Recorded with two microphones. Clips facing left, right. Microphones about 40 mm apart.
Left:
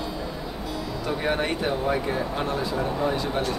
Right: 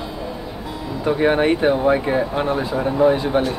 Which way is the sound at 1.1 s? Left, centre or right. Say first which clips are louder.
Right 10 dB; right.